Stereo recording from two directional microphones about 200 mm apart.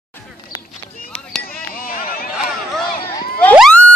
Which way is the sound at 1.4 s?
45° left (ahead or behind).